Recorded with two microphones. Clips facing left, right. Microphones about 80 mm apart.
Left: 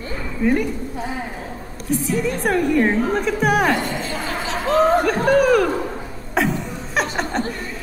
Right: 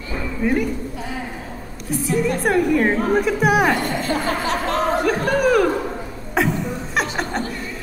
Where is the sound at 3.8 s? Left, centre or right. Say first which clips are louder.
Right 4 dB; right.